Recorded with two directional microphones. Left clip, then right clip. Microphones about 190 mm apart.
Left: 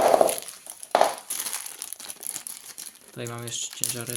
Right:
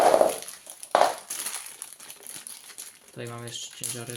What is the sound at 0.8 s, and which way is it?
Crushing, 20° left (ahead or behind).